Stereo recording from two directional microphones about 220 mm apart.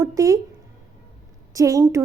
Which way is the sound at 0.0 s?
15° right (ahead or behind).